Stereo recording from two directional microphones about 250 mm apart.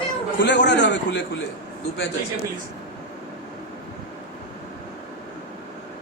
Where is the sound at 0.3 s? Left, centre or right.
Left.